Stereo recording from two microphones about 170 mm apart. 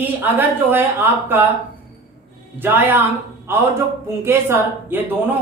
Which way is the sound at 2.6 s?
10° right (ahead or behind).